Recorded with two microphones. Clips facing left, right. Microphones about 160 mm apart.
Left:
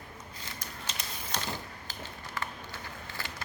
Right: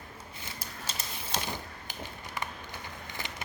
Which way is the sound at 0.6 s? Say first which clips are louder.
Right 1 dB; 5° right (ahead or behind).